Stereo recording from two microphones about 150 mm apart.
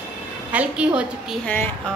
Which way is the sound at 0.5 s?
10° right (ahead or behind).